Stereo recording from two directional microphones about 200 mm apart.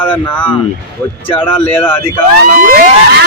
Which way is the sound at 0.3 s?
10° left (ahead or behind).